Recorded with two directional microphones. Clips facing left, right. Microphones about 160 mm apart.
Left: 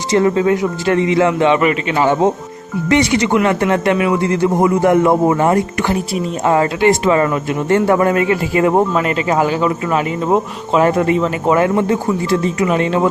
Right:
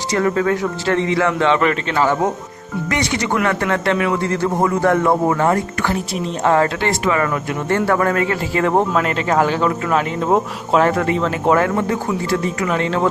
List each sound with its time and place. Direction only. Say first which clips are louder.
0.1 s a man's voice: left 4 dB; 25° left (ahead or behind)
7.0 s a man's voice: left 4 dB; 30° left (ahead or behind)
8.9 s speech: left 2 dB; 5° left (ahead or behind)
10.8 s a man's voice: left 3 dB; 20° left (ahead or behind)